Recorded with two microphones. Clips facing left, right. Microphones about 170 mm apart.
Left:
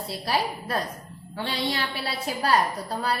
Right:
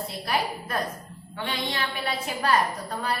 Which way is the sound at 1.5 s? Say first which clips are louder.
Left 2 dB; 30° left (ahead or behind).